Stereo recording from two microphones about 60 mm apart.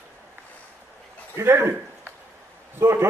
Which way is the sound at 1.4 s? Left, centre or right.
Right.